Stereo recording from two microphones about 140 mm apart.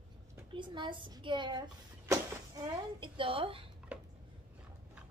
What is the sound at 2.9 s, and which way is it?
Speech, 35° right (ahead or behind).